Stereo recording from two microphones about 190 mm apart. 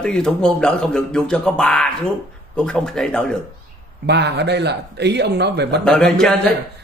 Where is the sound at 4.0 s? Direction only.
65° right (ahead or behind).